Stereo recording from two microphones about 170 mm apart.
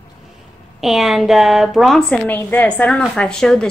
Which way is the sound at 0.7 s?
Centre (ahead or behind).